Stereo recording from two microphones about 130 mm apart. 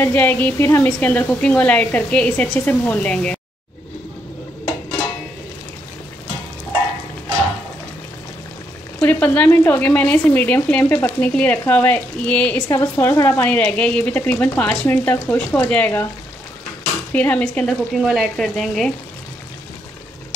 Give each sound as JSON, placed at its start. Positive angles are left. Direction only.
{"t": 0.0, "sound": "speech", "side_deg": 15}
{"t": 9.0, "sound": "speech", "side_deg": 15}
{"t": 12.6, "sound": "speech", "side_deg": 20}
{"t": 17.1, "sound": "speech", "side_deg": 10}
{"t": 18.0, "sound": "speech", "side_deg": 0}